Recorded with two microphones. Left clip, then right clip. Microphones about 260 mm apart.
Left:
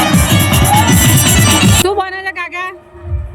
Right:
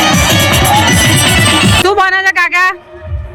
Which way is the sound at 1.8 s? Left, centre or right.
Centre.